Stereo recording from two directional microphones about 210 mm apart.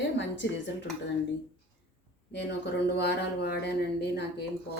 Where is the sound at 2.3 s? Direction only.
55° left (ahead or behind).